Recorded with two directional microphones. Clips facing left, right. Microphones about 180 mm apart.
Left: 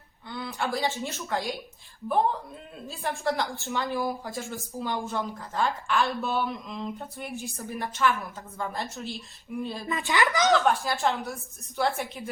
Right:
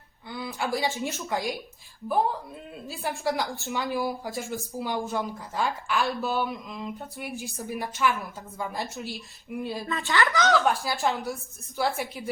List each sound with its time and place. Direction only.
0.3 s a sound: 5° right (ahead or behind)
1.0 s a woman's voice: 15° right (ahead or behind)
2.8 s a woman's voice: 5° right (ahead or behind)
9.8 s speech: 20° left (ahead or behind)
10.5 s a woman's voice: centre (ahead or behind)